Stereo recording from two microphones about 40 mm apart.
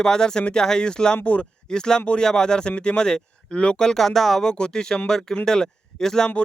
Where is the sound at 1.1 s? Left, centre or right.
Left.